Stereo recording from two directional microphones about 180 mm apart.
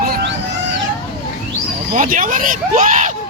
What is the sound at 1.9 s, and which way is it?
Speech, 50° right (ahead or behind).